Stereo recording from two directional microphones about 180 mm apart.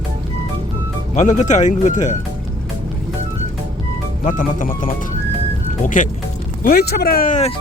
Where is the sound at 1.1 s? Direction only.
40° left (ahead or behind).